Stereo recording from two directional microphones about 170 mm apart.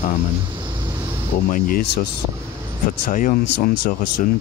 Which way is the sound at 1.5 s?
55° left (ahead or behind).